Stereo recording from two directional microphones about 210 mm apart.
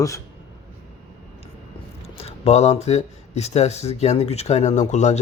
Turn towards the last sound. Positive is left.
turn(degrees=35)  # may be behind; listen again after turning